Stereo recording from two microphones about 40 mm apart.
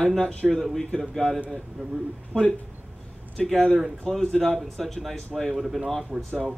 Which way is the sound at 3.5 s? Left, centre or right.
Centre.